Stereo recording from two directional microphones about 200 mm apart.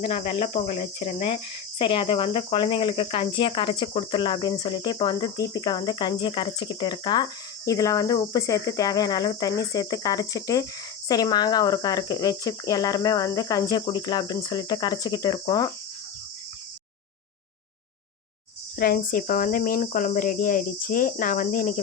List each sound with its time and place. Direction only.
0.0 s speech: 30° left (ahead or behind)
18.8 s speech: 45° left (ahead or behind)